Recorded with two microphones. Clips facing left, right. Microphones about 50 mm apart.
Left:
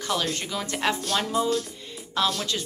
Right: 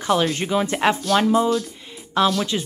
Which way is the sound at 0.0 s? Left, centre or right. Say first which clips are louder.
Right 7 dB; right.